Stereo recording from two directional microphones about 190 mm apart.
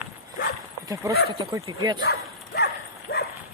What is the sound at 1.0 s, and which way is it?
Speech, 20° right (ahead or behind).